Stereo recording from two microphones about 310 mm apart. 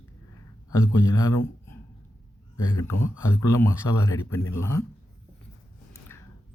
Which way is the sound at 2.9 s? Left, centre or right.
Left.